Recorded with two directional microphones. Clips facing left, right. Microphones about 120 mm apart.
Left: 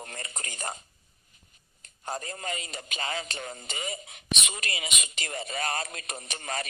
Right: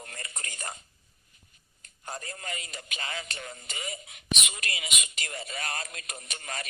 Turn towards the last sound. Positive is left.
turn(degrees=30)  # may be behind; listen again after turning